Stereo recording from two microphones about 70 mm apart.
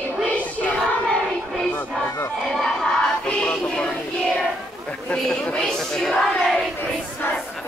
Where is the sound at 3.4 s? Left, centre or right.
Centre.